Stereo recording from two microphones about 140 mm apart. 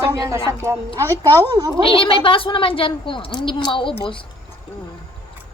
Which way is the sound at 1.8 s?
40° left (ahead or behind).